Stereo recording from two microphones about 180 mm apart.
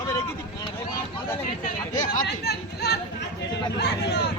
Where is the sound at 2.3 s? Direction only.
65° left (ahead or behind).